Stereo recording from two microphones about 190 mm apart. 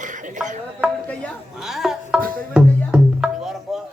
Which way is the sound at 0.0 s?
40° right (ahead or behind).